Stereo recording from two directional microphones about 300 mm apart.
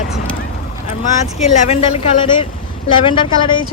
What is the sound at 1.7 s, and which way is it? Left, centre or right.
Speech, centre.